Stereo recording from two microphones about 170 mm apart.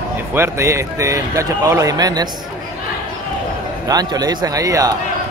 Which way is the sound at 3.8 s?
20° right (ahead or behind).